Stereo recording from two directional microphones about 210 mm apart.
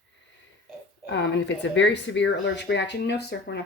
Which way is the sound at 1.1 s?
60° left (ahead or behind).